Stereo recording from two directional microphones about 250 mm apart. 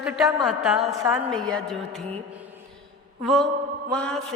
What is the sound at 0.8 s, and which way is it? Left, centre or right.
Speech, centre.